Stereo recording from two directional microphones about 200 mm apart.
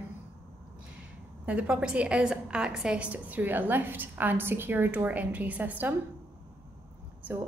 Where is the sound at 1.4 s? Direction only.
5° right (ahead or behind).